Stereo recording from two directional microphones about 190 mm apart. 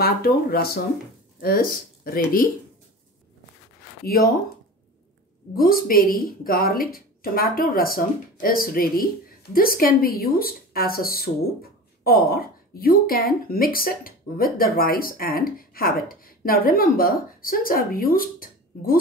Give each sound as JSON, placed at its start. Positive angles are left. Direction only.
{"t": 0.0, "sound": "a woman's voice", "side_deg": 55}
{"t": 4.0, "sound": "speech", "side_deg": 50}
{"t": 5.6, "sound": "a woman's voice", "side_deg": 50}